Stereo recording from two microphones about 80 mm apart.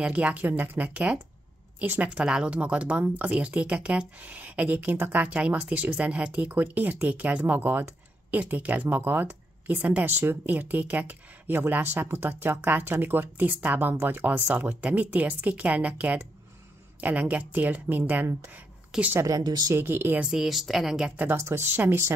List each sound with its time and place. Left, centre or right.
0.0 s a woman's voice: centre
19.1 s a woman's voice: right
19.4 s a woman's voice: right
19.7 s speech: right
20.2 s a woman's voice: centre
21.4 s speech: right